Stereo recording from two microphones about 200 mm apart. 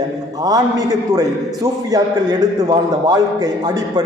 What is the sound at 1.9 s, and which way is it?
A man's voice, 20° right (ahead or behind).